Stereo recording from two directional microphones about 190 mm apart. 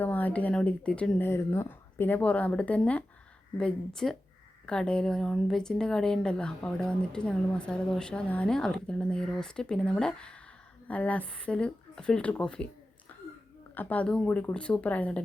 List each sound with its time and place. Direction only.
0.0 s speech: 10° left (ahead or behind)
13.7 s speech: 10° left (ahead or behind)